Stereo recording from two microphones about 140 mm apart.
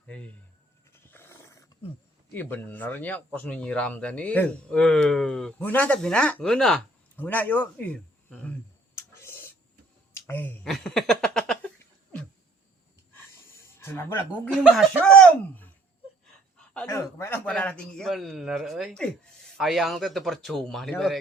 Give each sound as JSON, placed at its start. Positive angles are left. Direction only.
{"t": 0.9, "sound": "roaring cats", "side_deg": 15}
{"t": 2.3, "sound": "speech", "side_deg": 15}
{"t": 9.0, "sound": "a sound", "side_deg": 15}
{"t": 10.6, "sound": "a sound", "side_deg": 5}
{"t": 13.7, "sound": "speech", "side_deg": 20}
{"t": 14.5, "sound": "a man's voice", "side_deg": 0}
{"t": 16.8, "sound": "a man's voice", "side_deg": 20}